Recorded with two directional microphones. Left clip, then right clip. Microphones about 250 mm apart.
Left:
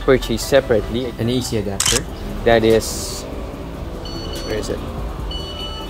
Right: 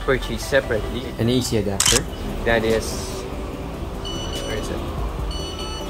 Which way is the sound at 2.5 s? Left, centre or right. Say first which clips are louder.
Left 6 dB; left.